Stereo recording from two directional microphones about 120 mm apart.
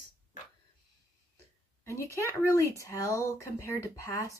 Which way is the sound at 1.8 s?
25° left (ahead or behind).